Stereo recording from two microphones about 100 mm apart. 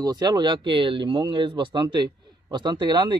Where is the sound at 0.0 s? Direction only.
45° right (ahead or behind).